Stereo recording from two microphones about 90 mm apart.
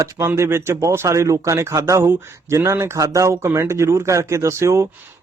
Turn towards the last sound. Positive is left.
turn(degrees=-30)  # may be behind; listen again after turning